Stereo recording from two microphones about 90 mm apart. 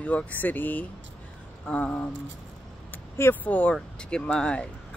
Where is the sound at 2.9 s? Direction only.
25° left (ahead or behind).